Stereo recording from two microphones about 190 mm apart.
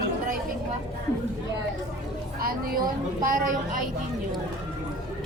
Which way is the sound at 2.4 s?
50° right (ahead or behind).